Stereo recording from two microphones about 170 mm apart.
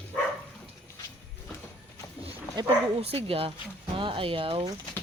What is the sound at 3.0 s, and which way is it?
A man's voice, 35° right (ahead or behind).